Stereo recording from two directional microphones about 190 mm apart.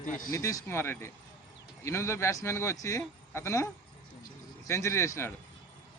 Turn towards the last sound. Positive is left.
turn(degrees=15)  # may be behind; listen again after turning